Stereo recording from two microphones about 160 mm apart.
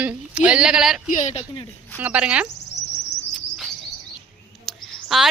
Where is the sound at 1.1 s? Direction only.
45° left (ahead or behind).